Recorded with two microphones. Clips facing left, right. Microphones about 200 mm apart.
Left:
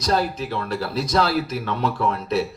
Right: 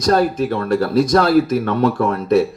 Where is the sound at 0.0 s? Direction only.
50° right (ahead or behind).